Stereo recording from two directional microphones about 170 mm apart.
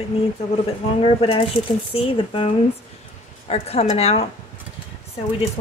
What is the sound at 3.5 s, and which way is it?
Speech, 40° left (ahead or behind).